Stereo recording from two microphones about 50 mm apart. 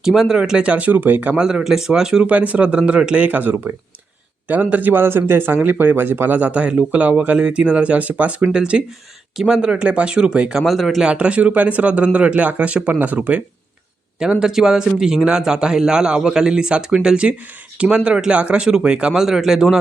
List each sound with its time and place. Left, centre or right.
0.0 s speech: centre; by 1.4 s right
1.4 s a man's voice: centre
2.2 s speech: right
3.2 s a man's voice: right
6.5 s speech: right
9.3 s speech: centre
10.7 s speech: centre
11.0 s speech: right
14.2 s a man's voice: centre